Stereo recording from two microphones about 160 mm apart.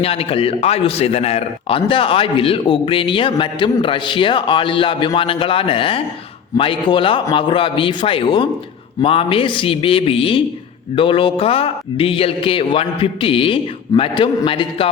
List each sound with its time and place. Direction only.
0.0 s a man's voice: 35° left (ahead or behind)